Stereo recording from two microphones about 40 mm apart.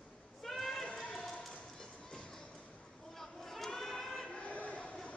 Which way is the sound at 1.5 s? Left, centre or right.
Centre.